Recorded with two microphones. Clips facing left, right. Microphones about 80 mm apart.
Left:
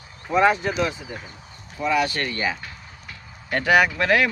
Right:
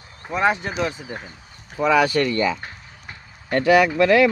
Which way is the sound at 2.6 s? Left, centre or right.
Right.